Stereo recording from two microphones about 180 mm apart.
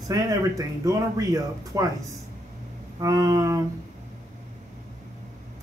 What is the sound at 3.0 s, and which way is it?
Speech, 20° right (ahead or behind).